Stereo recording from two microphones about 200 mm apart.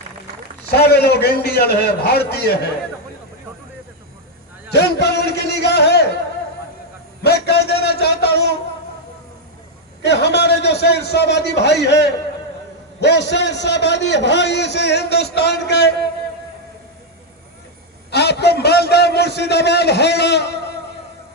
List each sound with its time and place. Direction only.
0.8 s a man's voice: 55° left (ahead or behind)
4.7 s a man's voice: 55° left (ahead or behind)
7.2 s a sound: 55° left (ahead or behind)
10.0 s a man's voice: 60° left (ahead or behind)
18.1 s a man's voice: 55° left (ahead or behind)